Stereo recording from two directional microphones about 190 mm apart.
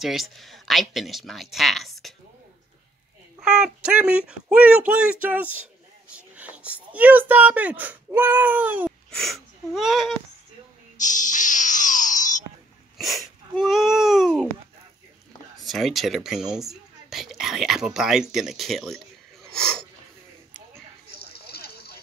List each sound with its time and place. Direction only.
0.0 s speech: centre (ahead or behind)
3.3 s speech: 5° right (ahead or behind)
11.0 s music: 40° left (ahead or behind)
12.9 s speech: centre (ahead or behind)
15.6 s speech: centre (ahead or behind)
19.4 s wheeze: 5° left (ahead or behind)
21.2 s a sound: 55° left (ahead or behind)